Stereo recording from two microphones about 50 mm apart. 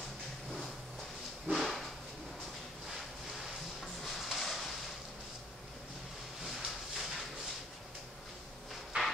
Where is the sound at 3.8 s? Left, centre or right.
Centre.